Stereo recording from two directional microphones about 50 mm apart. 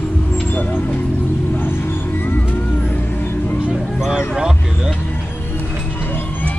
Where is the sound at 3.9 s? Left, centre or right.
Centre.